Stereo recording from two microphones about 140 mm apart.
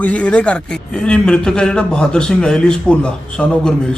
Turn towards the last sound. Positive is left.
turn(degrees=5)  # may be behind; listen again after turning